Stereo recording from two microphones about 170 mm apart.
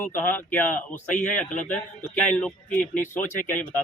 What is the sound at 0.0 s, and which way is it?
Speech, 10° left (ahead or behind).